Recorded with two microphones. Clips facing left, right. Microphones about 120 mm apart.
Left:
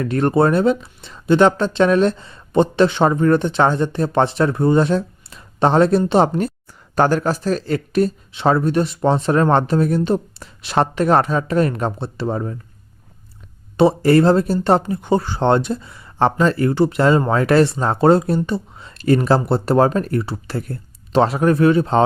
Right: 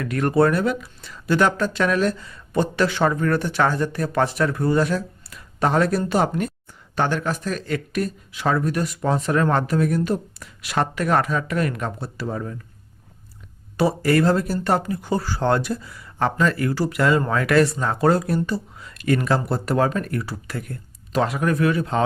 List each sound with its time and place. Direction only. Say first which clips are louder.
0.0 s speech: left 3 dB; 30° left (ahead or behind)
6.9 s speech: left 6 dB; 40° left (ahead or behind)
13.7 s speech: left 6 dB; 25° left (ahead or behind)